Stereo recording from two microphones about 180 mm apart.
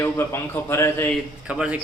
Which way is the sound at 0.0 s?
10° left (ahead or behind).